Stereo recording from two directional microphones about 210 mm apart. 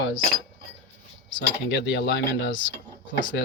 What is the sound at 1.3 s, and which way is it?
Speech, 55° left (ahead or behind).